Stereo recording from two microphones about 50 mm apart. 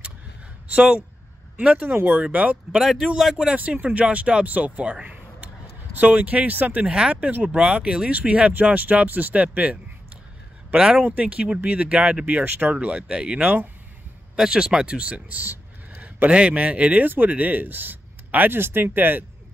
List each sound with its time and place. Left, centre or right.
1.6 s speech: right
2.8 s speech: centre
3.5 s speech: right
5.9 s speech: right
6.9 s speech: right
10.7 s speech: centre
11.1 s speech: right
12.7 s speech: right
15.4 s a sound: right
16.0 s a man's voice: right